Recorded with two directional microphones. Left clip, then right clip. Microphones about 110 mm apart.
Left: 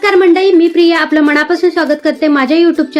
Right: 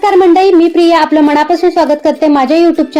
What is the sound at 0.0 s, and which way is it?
A woman's voice, 35° right (ahead or behind).